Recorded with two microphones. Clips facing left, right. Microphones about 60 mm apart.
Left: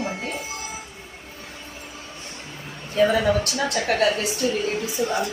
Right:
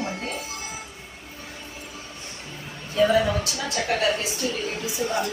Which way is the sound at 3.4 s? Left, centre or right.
Left.